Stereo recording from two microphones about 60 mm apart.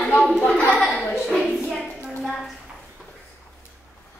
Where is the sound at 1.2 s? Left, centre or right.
Centre.